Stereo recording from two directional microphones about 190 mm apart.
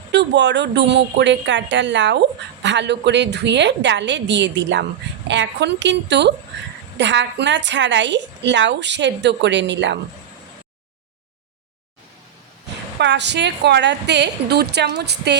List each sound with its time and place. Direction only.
0.1 s a woman's voice: 65° right (ahead or behind)
13.0 s a woman's voice: 65° right (ahead or behind)